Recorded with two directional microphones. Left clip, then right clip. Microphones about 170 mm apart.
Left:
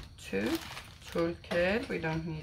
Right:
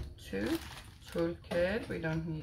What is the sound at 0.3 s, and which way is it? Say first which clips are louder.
Speech: left 3 dB; 10° left (ahead or behind).